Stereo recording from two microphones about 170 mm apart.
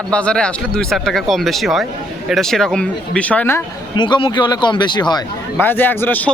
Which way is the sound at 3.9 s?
25° left (ahead or behind).